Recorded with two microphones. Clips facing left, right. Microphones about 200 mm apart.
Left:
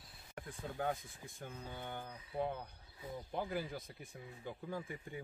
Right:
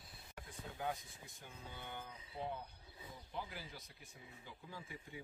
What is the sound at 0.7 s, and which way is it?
Speech, 50° left (ahead or behind).